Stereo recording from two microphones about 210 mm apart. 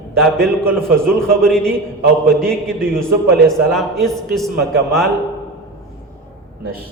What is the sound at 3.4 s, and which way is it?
A man's voice, centre (ahead or behind).